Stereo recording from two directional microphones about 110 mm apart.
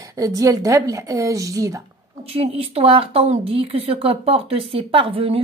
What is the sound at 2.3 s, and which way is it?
A woman's voice, 65° right (ahead or behind).